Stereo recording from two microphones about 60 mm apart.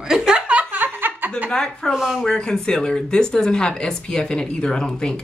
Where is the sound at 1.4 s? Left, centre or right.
Centre.